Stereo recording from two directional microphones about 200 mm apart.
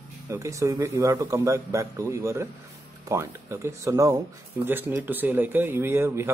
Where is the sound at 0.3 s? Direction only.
15° right (ahead or behind).